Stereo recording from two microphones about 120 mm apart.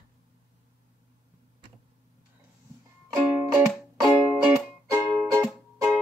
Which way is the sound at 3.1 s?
20° right (ahead or behind).